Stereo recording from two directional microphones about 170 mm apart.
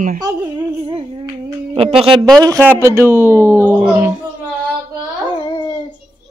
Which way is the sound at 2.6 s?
15° right (ahead or behind).